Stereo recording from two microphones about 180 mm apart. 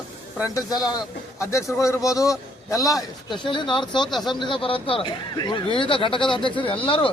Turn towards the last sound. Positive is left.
turn(degrees=30)  # may be behind; listen again after turning